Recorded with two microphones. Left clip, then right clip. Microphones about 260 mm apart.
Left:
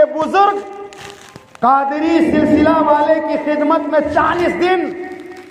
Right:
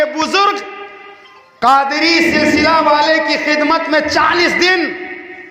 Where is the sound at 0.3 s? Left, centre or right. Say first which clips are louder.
Left 1 dB; right.